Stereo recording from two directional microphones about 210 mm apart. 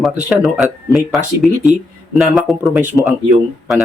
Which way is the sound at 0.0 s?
5° right (ahead or behind).